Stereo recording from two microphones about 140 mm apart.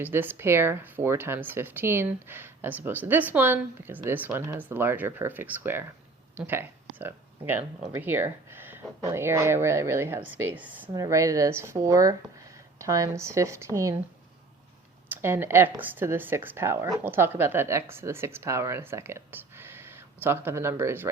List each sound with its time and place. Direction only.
0.0 s speech: 15° right (ahead or behind)
10.9 s speech: 25° right (ahead or behind)
15.1 s speech: 15° right (ahead or behind)